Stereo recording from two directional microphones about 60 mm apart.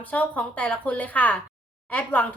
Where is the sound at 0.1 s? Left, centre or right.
Left.